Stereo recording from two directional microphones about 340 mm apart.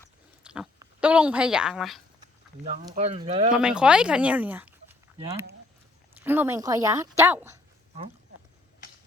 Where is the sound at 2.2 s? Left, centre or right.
Centre.